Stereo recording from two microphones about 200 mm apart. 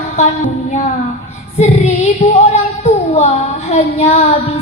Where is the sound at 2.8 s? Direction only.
35° left (ahead or behind).